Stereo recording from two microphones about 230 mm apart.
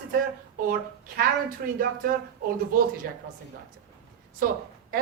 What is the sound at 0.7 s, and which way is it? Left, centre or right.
Speech, right.